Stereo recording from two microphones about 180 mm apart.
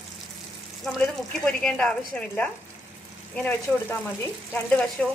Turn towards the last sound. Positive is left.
turn(degrees=5)  # may be behind; listen again after turning